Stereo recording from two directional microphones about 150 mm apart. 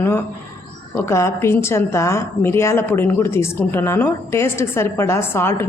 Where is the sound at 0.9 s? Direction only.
15° left (ahead or behind).